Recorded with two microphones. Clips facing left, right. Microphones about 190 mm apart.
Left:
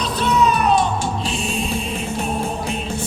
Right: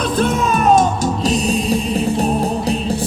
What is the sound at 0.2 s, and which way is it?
Music, 50° right (ahead or behind).